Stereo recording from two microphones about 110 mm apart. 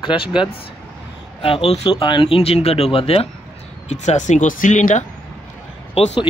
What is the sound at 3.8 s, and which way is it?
Speech, 90° left.